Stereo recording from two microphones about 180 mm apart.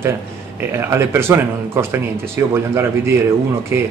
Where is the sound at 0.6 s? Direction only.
15° right (ahead or behind).